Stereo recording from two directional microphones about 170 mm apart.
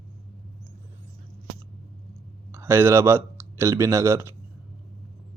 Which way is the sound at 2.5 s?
15° right (ahead or behind).